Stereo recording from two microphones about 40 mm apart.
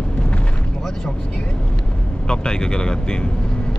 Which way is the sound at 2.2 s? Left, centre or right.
Centre.